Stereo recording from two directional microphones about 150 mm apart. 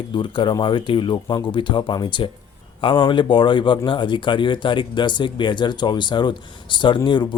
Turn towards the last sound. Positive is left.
turn(degrees=30)  # may be behind; listen again after turning